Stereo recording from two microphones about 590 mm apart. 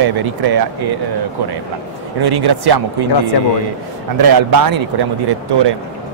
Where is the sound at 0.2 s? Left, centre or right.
Right.